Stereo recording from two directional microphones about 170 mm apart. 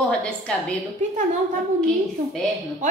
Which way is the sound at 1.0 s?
45° right (ahead or behind).